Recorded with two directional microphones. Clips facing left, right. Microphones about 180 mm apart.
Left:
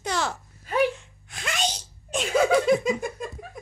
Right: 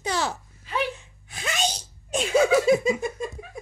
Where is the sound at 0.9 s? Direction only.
5° right (ahead or behind).